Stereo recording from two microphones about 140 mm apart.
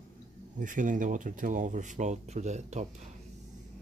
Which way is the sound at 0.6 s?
65° right (ahead or behind).